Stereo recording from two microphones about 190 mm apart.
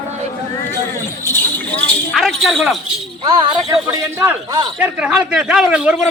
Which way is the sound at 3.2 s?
25° right (ahead or behind).